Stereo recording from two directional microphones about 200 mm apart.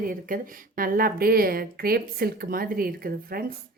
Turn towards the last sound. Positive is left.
turn(degrees=-45)  # may be behind; listen again after turning